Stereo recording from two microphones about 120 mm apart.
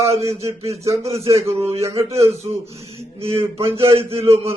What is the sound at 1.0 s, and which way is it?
Speech, 60° right (ahead or behind).